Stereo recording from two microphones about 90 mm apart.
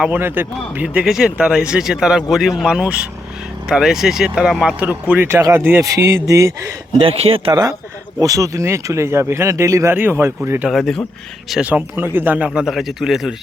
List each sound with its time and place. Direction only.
0.1 s speech: 25° right (ahead or behind)
1.0 s speech: 5° right (ahead or behind)
4.9 s speech: 20° right (ahead or behind)
5.3 s speech: 30° right (ahead or behind)
7.0 s speech: 90° right
7.5 s speech: 40° right (ahead or behind)
10.7 s speech: 5° left (ahead or behind)
11.6 s speech: 20° right (ahead or behind)
12.5 s speech: 5° right (ahead or behind)